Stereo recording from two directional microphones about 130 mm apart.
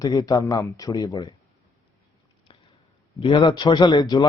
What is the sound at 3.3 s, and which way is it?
Speech, 35° left (ahead or behind).